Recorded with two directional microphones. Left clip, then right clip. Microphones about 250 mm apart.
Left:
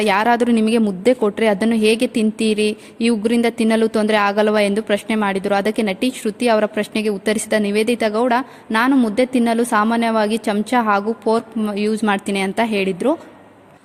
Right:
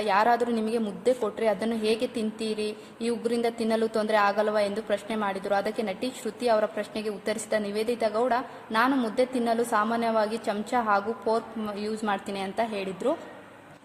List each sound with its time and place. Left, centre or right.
0.0 s speech: left